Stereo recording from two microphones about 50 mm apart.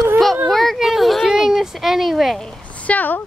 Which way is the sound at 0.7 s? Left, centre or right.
Centre.